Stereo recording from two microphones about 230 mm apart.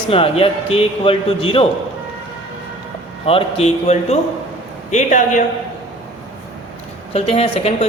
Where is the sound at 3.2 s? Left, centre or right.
Left.